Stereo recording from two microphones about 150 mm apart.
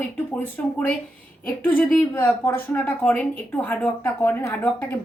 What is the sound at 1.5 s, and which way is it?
A woman's voice, 10° left (ahead or behind).